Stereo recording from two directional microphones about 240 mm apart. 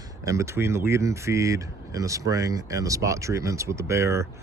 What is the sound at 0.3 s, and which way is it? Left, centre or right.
Speech, centre.